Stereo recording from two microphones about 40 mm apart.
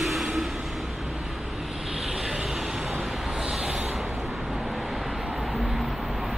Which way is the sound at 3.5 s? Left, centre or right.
Centre.